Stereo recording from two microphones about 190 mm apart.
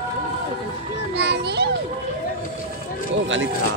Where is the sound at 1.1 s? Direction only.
60° right (ahead or behind).